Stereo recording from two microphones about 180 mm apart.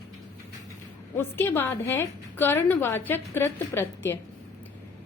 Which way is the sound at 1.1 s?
10° left (ahead or behind).